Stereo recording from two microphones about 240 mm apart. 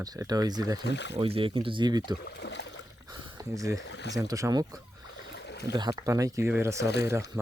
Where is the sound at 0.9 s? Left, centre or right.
Left.